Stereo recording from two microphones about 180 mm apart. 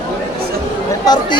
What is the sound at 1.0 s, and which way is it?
Speech, 20° left (ahead or behind).